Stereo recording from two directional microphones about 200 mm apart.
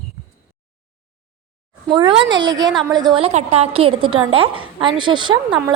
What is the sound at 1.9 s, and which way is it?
A woman's voice, 25° right (ahead or behind).